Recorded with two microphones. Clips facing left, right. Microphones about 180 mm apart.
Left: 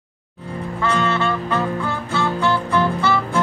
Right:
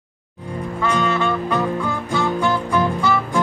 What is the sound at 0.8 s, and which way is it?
Music, 15° right (ahead or behind).